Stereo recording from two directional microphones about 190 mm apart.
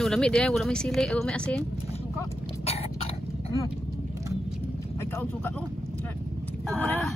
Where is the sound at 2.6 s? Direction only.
30° left (ahead or behind).